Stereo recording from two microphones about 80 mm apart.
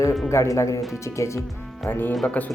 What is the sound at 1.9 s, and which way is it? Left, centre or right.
Speech, left.